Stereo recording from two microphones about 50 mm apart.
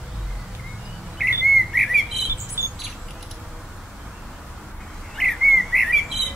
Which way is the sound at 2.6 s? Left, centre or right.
Right.